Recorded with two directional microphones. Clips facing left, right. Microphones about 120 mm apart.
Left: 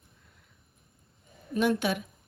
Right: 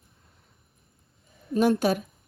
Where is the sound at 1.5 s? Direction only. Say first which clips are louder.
Right 5 dB; 40° right (ahead or behind).